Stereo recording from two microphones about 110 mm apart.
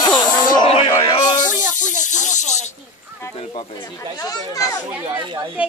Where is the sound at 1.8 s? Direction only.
90° left.